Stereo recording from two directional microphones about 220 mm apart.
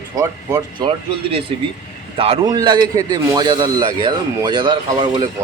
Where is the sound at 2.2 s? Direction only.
20° right (ahead or behind).